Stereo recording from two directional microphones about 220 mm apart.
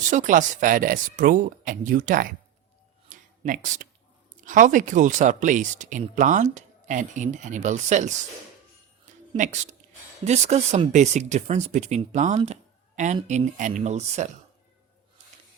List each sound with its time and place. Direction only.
0.1 s speech: 35° right (ahead or behind)
3.1 s a sound: 35° right (ahead or behind)
4.4 s speech: 35° right (ahead or behind)
9.3 s speech: 35° right (ahead or behind)